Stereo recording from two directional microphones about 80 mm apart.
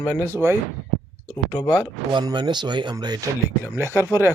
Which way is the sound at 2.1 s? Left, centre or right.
Right.